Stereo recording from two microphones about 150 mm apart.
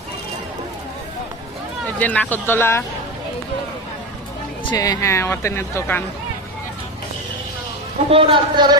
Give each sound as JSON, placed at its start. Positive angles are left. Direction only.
{"t": 2.0, "sound": "speech", "side_deg": 10}
{"t": 4.7, "sound": "speech", "side_deg": 25}
{"t": 8.1, "sound": "speech", "side_deg": -35}